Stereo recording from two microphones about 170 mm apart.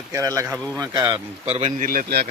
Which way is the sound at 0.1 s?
15° right (ahead or behind).